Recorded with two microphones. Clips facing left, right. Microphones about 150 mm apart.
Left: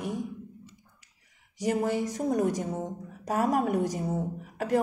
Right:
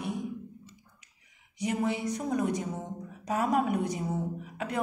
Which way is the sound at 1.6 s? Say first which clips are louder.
Left 3 dB; 45° left (ahead or behind).